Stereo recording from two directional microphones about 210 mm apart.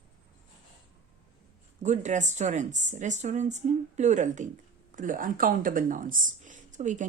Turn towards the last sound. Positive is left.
turn(degrees=-35)  # may be behind; listen again after turning